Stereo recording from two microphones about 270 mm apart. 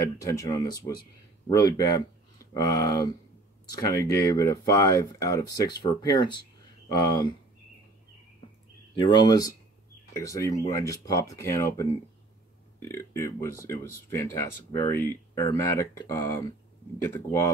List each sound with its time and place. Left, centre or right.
0.0 s speech: centre
8.9 s speech: centre